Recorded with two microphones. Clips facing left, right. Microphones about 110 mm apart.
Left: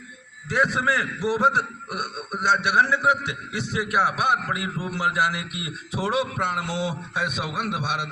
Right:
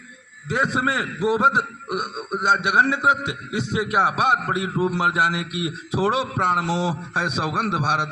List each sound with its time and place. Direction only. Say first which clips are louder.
0.4 s a man's voice: right 1 dB; 20° right (ahead or behind)